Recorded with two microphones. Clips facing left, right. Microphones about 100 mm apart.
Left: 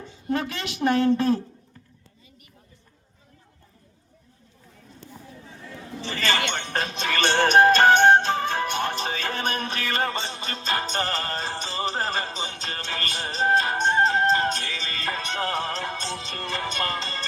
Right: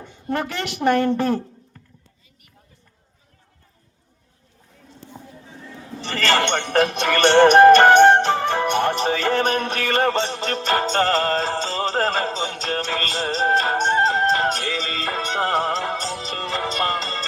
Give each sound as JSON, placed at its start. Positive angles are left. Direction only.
{"t": 0.0, "sound": "a woman's voice", "side_deg": -65}
{"t": 5.2, "sound": "a sound", "side_deg": -25}
{"t": 6.0, "sound": "chink", "side_deg": -75}
{"t": 6.5, "sound": "music", "side_deg": -70}